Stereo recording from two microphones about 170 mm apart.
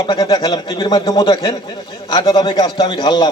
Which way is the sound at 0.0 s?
25° left (ahead or behind).